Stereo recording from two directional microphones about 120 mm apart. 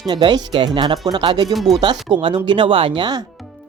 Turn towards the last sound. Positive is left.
turn(degrees=-40)  # may be behind; listen again after turning